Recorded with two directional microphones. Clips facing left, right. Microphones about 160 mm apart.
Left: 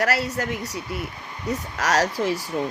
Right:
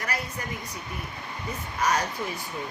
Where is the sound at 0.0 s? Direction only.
90° left.